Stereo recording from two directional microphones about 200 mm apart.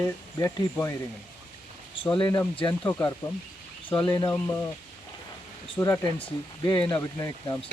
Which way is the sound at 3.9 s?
20° left (ahead or behind).